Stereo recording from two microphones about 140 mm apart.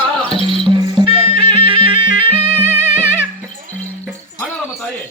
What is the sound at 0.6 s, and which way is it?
Music, 35° right (ahead or behind).